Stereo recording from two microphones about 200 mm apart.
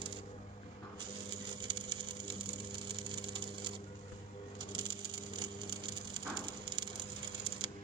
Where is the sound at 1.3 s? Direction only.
25° right (ahead or behind).